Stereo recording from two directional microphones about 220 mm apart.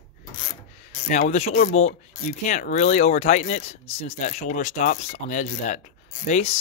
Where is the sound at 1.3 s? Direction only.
30° left (ahead or behind).